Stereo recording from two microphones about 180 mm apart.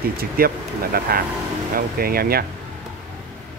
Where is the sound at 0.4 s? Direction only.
55° right (ahead or behind).